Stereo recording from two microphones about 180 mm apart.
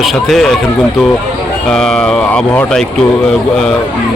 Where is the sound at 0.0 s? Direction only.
Centre (ahead or behind).